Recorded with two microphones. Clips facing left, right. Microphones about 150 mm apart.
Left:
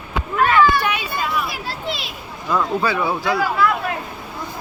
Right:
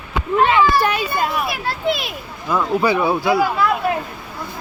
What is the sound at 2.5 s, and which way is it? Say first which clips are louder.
Speech: right 2 dB; 5° right (ahead or behind).